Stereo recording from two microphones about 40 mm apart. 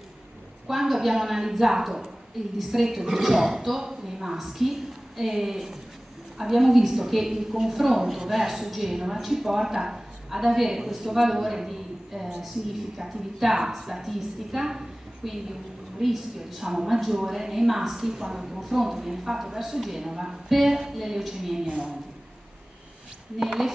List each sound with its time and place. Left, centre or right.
0.7 s a woman's voice: centre
21.6 s a woman's voice: right
23.4 s speech: centre